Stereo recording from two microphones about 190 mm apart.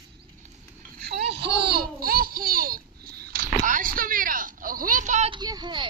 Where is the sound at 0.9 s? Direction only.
55° right (ahead or behind); by 5.3 s 40° right (ahead or behind).